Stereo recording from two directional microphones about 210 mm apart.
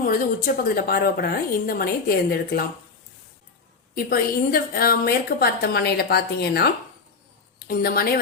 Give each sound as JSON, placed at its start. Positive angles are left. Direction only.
{"t": 0.0, "sound": "a woman's voice", "side_deg": 40}
{"t": 3.9, "sound": "a woman's voice", "side_deg": 45}
{"t": 7.7, "sound": "a woman's voice", "side_deg": 45}